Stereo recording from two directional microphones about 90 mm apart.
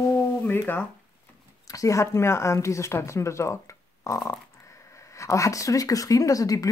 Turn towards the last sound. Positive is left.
turn(degrees=40)  # may be behind; listen again after turning